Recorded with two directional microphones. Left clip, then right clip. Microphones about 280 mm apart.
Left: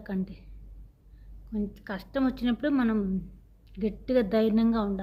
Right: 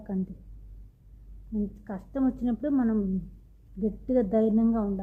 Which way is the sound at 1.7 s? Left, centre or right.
Centre.